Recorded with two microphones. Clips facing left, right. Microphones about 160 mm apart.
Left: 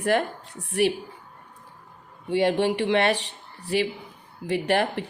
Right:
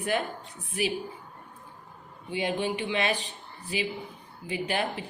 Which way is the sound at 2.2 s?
70° left (ahead or behind).